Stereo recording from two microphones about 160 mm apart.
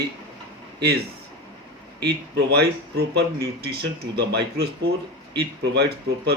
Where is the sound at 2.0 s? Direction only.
90° right.